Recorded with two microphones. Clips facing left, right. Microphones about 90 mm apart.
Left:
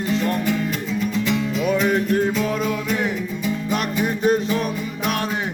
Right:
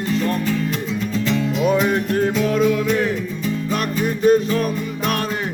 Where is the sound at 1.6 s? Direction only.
Centre (ahead or behind).